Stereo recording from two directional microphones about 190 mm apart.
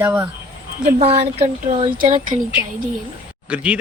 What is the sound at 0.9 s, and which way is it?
Speech, 35° right (ahead or behind).